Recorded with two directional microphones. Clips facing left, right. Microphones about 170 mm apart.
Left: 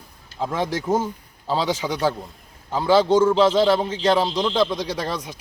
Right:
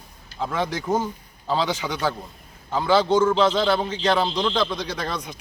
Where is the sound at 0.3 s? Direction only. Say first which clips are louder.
Left 2 dB; 5° left (ahead or behind).